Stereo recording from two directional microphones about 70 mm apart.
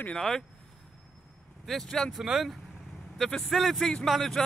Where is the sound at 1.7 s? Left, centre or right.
Centre.